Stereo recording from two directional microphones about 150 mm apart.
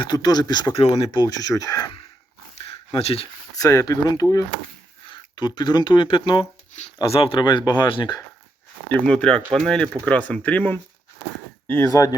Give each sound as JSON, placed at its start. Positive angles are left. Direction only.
{"t": 0.0, "sound": "speech", "side_deg": 30}
{"t": 2.9, "sound": "speech", "side_deg": 40}
{"t": 3.6, "sound": "speech", "side_deg": 20}
{"t": 8.9, "sound": "speech", "side_deg": 5}